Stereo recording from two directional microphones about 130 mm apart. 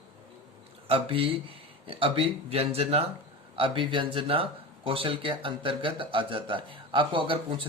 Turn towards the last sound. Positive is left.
turn(degrees=-40)  # may be behind; listen again after turning